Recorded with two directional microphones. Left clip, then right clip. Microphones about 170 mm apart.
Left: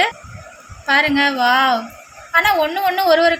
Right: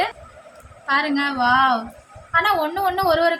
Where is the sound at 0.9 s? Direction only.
30° left (ahead or behind).